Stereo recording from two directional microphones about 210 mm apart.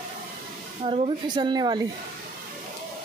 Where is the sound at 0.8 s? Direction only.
25° right (ahead or behind).